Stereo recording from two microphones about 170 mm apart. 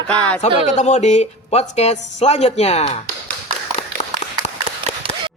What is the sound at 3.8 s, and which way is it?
Clapping, 35° left (ahead or behind).